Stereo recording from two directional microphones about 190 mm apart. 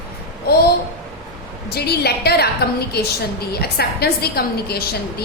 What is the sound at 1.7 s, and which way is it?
A woman's voice, 55° left (ahead or behind).